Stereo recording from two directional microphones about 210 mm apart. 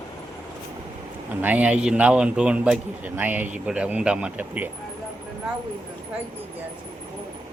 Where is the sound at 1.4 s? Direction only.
5° right (ahead or behind).